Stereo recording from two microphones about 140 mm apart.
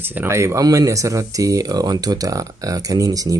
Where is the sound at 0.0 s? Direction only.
15° right (ahead or behind).